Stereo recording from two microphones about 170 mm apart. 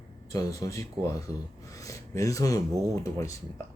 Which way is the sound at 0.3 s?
20° left (ahead or behind).